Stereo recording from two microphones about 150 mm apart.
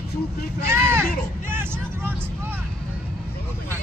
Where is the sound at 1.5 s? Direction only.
15° right (ahead or behind).